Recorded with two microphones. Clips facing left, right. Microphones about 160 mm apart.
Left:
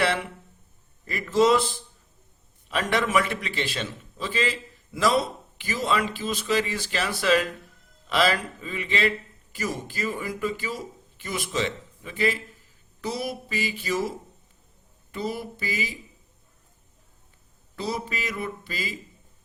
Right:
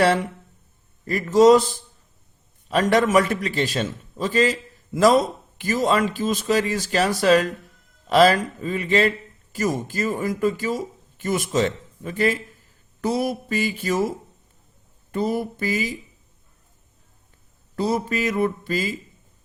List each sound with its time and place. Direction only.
1.0 s a man's voice: 40° right (ahead or behind)
15.1 s a man's voice: 45° right (ahead or behind)
17.7 s a man's voice: 45° right (ahead or behind)